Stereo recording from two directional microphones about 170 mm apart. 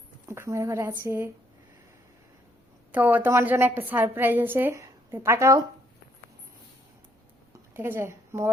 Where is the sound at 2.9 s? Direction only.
10° right (ahead or behind).